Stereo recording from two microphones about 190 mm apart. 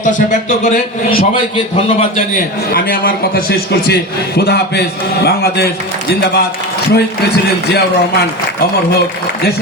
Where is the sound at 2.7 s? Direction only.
50° left (ahead or behind).